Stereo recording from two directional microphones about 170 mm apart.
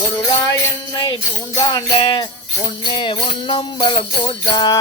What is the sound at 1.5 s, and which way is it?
Music, 25° left (ahead or behind).